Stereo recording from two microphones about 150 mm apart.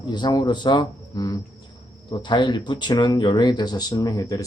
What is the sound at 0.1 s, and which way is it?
Speech, 30° left (ahead or behind).